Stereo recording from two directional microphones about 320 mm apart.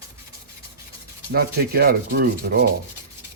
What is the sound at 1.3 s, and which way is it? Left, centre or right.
Rub, right.